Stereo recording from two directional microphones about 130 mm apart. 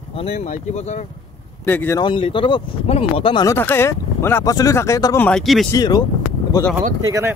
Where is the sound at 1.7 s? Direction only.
15° left (ahead or behind).